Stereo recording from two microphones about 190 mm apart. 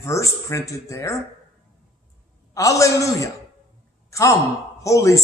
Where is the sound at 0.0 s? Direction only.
15° left (ahead or behind).